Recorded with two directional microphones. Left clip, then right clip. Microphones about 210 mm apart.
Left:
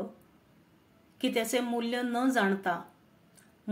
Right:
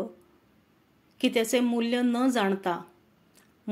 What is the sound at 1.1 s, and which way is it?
Speech, 40° right (ahead or behind).